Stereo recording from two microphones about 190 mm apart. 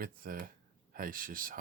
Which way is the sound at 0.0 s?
50° right (ahead or behind).